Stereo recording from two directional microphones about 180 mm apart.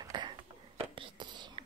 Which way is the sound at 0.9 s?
25° right (ahead or behind).